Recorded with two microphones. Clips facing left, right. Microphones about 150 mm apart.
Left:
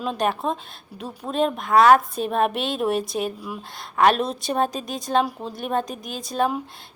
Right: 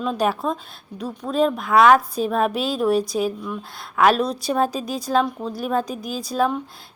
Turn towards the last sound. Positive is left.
turn(degrees=0)  # may be behind; listen again after turning